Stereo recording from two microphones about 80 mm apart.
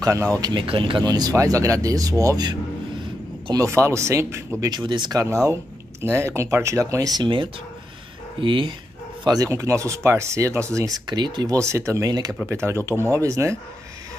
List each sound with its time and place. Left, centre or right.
0.0 s speech: right
0.4 s speech: right
1.0 s speech: right
1.3 s speech: right
3.5 s speech: right
4.6 s speech: right
5.2 s speech: right
8.4 s speech: right
9.2 s speech: right
9.5 s speech: right
10.9 s speech: right
11.5 s speech: right